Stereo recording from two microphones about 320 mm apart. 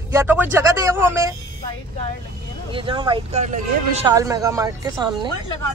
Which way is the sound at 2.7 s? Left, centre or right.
Centre.